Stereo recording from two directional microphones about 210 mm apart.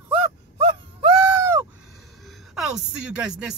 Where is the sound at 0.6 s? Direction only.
25° right (ahead or behind).